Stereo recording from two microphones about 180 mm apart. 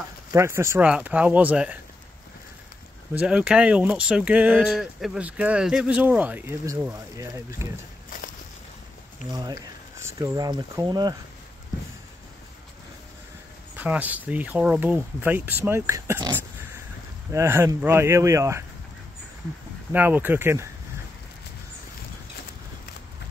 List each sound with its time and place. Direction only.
0.3 s speech: 15° right (ahead or behind)
3.2 s speech: 5° right (ahead or behind)
9.3 s speech: 20° right (ahead or behind)
13.7 s speech: 10° right (ahead or behind)
19.9 s speech: 10° right (ahead or behind)